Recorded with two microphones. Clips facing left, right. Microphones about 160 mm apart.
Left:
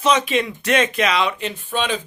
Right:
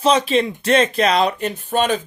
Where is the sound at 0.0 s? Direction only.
30° right (ahead or behind).